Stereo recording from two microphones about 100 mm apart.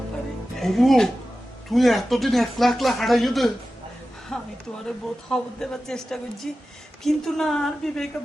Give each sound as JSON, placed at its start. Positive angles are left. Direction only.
{"t": 0.5, "sound": "speech", "side_deg": 0}